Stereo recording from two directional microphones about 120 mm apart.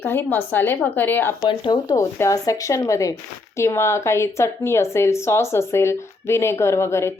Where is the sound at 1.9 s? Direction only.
30° left (ahead or behind).